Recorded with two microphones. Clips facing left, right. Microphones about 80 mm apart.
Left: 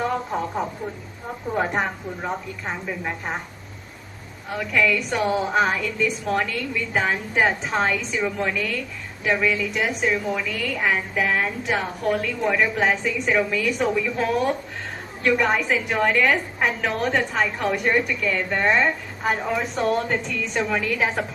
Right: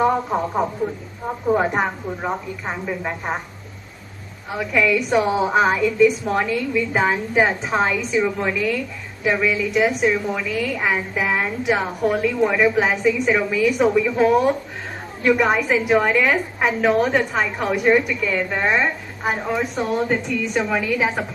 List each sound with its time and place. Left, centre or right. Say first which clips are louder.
0.0 s speech: right 6 dB; centre
1.5 s a woman's voice: even; centre
4.5 s a woman's voice: right 3 dB; centre